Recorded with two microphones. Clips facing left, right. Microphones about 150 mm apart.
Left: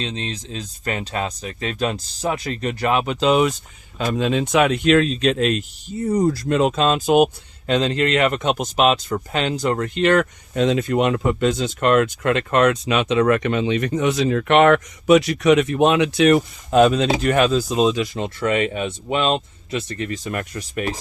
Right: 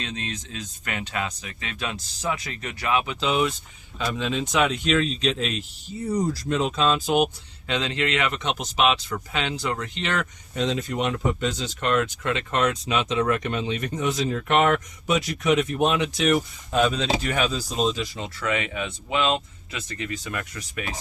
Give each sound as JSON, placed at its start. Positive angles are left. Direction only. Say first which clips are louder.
{"t": 0.0, "sound": "speech", "louder": "left 5 dB", "side_deg": 30}
{"t": 3.0, "sound": "speech", "louder": "left 7 dB", "side_deg": 65}
{"t": 3.9, "sound": "speech", "louder": "left 6 dB", "side_deg": 50}
{"t": 18.3, "sound": "speech", "louder": "left 6 dB", "side_deg": 40}